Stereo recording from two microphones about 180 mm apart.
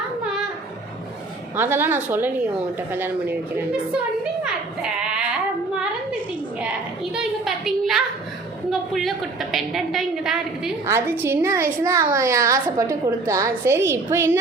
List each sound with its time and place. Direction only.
1.5 s a woman's voice: 10° right (ahead or behind)
4.4 s sheep: 5° right (ahead or behind)
6.6 s a sound: 5° right (ahead or behind)
8.7 s a woman's voice: centre (ahead or behind)
10.8 s a woman's voice: 15° right (ahead or behind)